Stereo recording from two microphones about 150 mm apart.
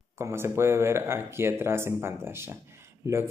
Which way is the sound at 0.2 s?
15° right (ahead or behind).